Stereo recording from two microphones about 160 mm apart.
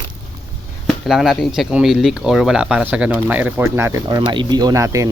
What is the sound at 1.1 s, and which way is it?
Speech, centre (ahead or behind).